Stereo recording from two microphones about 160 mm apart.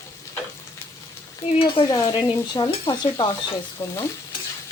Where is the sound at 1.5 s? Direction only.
35° left (ahead or behind).